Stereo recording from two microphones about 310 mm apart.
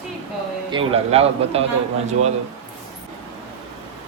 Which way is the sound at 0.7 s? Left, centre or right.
Centre.